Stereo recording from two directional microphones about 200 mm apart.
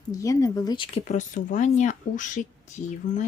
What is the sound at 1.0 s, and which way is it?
Speech, 40° left (ahead or behind).